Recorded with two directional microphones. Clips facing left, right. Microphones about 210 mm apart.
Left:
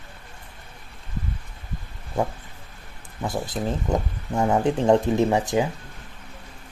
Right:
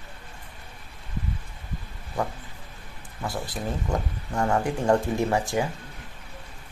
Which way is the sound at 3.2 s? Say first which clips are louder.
Left 4 dB; 20° left (ahead or behind).